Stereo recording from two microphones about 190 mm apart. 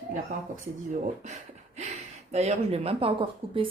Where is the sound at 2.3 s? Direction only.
35° right (ahead or behind).